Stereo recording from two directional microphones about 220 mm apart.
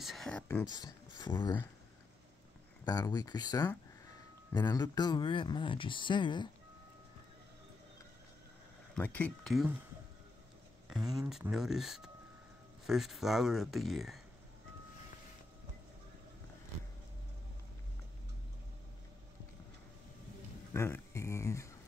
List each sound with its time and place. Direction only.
0.0 s speech: centre (ahead or behind)
0.7 s speech: 20° left (ahead or behind)
2.8 s speech: 15° left (ahead or behind)
8.9 s speech: 5° left (ahead or behind)
10.9 s speech: centre (ahead or behind)
20.7 s a sound: 10° left (ahead or behind)